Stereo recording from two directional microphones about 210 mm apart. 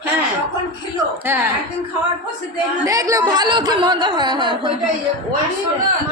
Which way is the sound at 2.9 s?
15° right (ahead or behind).